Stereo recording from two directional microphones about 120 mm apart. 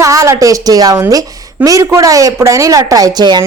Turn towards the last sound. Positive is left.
turn(degrees=-35)  # may be behind; listen again after turning